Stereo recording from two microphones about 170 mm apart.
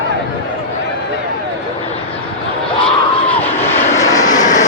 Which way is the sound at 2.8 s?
10° left (ahead or behind).